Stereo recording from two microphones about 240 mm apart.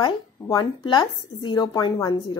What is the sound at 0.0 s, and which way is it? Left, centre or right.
A woman's voice, centre.